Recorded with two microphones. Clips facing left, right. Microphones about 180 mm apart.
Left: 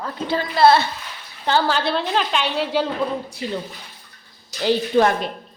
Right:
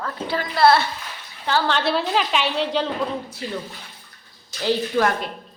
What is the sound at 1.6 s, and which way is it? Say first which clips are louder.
A woman's voice: even; centre (ahead or behind).